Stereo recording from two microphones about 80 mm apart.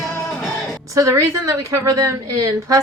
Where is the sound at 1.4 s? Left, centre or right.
Right.